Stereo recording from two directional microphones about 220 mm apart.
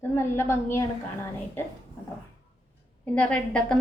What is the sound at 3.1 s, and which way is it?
Speech, 5° left (ahead or behind).